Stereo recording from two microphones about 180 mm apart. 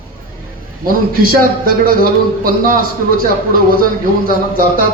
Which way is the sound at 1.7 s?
55° right (ahead or behind).